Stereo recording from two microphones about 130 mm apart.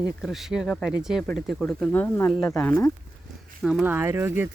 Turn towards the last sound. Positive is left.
turn(degrees=-15)  # may be behind; listen again after turning